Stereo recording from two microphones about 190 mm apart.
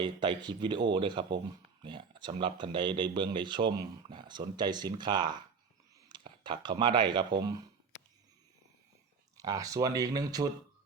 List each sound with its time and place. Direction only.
0.0 s speech: 25° right (ahead or behind)
9.4 s speech: 20° right (ahead or behind)